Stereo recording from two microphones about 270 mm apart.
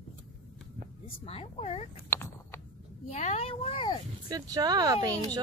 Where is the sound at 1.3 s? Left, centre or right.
Left.